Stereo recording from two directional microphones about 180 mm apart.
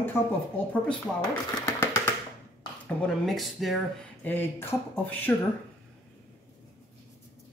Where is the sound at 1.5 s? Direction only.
15° left (ahead or behind).